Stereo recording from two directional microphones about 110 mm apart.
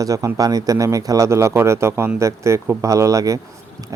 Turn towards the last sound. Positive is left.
turn(degrees=-30)  # may be behind; listen again after turning